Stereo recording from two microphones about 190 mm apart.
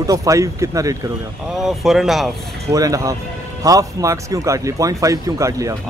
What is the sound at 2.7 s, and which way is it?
Speech, 15° right (ahead or behind).